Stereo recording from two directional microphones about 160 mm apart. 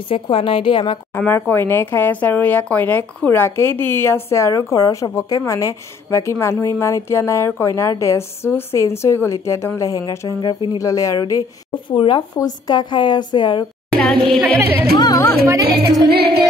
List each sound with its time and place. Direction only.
0.1 s a woman's voice: 35° left (ahead or behind)
1.1 s a woman's voice: 10° left (ahead or behind); by 13.7 s 30° left (ahead or behind)
13.9 s speech: 5° left (ahead or behind)
14.4 s speech: 10° right (ahead or behind)
15.0 s a woman's voice: 25° left (ahead or behind)
15.6 s music: 80° right